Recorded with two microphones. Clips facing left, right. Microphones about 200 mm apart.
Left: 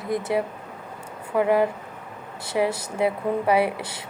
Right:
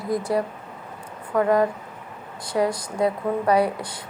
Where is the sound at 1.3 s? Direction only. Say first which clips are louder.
Right 1 dB; 10° left (ahead or behind).